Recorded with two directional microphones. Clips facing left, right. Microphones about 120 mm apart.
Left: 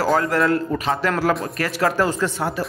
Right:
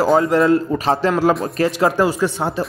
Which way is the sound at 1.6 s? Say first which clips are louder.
Right 4 dB; 20° right (ahead or behind).